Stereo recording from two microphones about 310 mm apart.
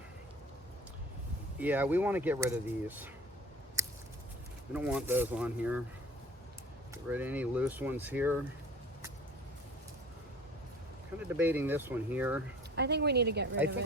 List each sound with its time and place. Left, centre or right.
1.5 s speech: centre
3.8 s a sound: centre
4.7 s speech: centre
6.9 s speech: centre
11.2 s speech: centre
12.7 s speech: right